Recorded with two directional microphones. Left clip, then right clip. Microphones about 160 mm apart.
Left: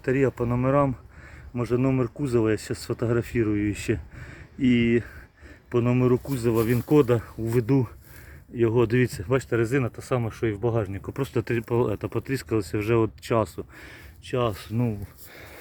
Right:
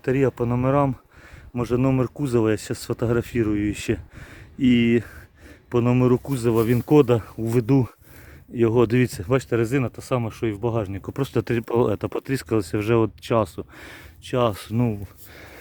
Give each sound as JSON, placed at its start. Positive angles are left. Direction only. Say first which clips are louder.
{"t": 0.0, "sound": "speech", "louder": "right 2 dB", "side_deg": -20}
{"t": 13.7, "sound": "speech", "louder": "right 3 dB", "side_deg": -60}